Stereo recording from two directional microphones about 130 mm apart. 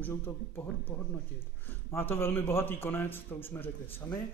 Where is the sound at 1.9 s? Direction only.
20° left (ahead or behind).